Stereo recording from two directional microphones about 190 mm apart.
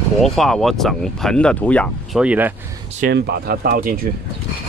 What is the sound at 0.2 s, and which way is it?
Speech, centre (ahead or behind).